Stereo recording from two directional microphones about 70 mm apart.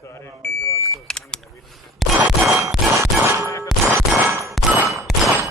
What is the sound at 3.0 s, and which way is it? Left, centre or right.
Shatter, right.